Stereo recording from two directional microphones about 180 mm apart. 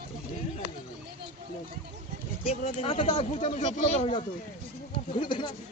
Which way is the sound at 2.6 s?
35° left (ahead or behind).